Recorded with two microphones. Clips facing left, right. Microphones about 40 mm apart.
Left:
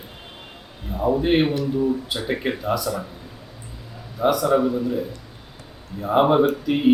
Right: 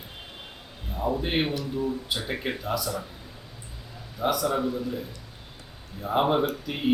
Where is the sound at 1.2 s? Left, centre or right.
Centre.